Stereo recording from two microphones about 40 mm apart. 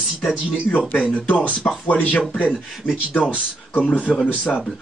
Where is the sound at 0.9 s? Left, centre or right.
Left.